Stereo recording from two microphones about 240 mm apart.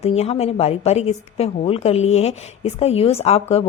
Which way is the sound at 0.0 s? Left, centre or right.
Left.